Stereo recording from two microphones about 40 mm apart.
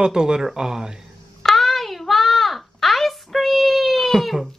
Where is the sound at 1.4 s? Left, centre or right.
Centre.